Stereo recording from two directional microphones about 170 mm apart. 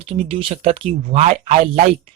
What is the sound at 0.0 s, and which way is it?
Speech, 35° right (ahead or behind).